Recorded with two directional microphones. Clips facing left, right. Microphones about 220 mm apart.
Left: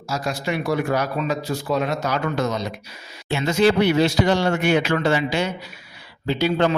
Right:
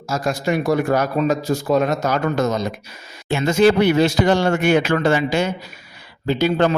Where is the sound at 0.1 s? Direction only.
45° right (ahead or behind).